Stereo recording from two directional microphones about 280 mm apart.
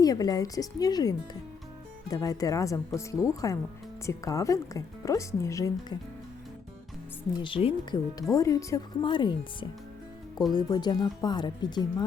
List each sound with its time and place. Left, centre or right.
0.0 s speech: centre
7.4 s speech: centre